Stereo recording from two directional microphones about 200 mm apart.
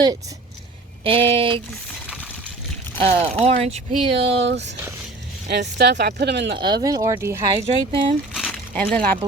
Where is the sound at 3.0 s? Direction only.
30° right (ahead or behind).